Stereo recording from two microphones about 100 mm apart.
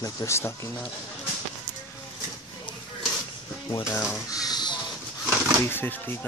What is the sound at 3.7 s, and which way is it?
Speech, 30° left (ahead or behind).